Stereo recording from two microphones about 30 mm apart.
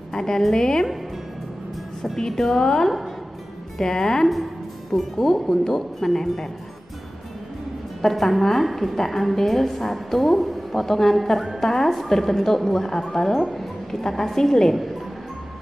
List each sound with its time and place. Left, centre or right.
0.1 s a woman's voice: centre
2.1 s a woman's voice: centre
8.0 s a woman's voice: centre
8.9 s a woman's voice: centre